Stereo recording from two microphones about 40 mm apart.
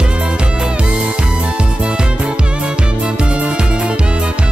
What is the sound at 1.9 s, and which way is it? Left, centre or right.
Music, right.